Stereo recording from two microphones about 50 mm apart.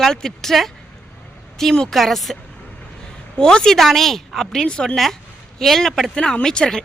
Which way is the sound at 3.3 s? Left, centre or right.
Centre.